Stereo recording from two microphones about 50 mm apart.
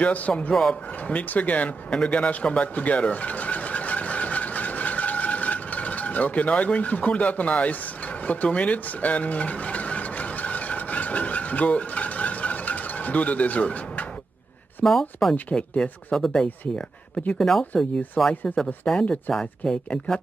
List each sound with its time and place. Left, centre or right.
0.0 s speech: left
0.5 s speech: centre
1.0 s speech: left
2.0 s a sound: left
14.9 s speech: centre
15.5 s speech: centre
16.4 s speech: left
17.4 s speech: centre
18.3 s speech: left
18.9 s speech: centre